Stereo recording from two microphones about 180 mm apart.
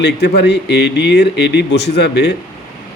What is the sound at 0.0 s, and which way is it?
Speech, 70° left (ahead or behind).